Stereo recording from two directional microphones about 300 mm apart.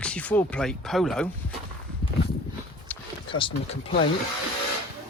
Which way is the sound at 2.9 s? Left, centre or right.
Centre.